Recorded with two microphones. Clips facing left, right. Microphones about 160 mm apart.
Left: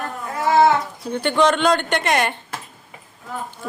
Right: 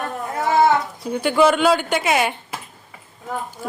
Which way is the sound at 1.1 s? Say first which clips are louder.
Right 2 dB; 5° right (ahead or behind).